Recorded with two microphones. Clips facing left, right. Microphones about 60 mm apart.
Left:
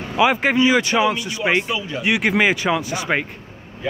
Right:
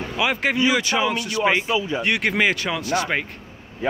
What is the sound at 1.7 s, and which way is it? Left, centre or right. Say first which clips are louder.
Speech: right 3 dB; right.